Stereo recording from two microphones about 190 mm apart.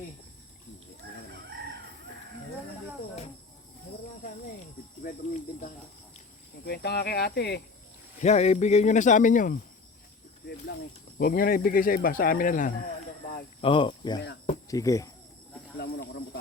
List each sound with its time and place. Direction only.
5.3 s cricket: 45° left (ahead or behind)
6.7 s speech: 60° left (ahead or behind)
8.2 s speech: 35° left (ahead or behind)
11.2 s speech: 50° left (ahead or behind)
13.6 s speech: 25° left (ahead or behind)
15.8 s snake: 55° left (ahead or behind)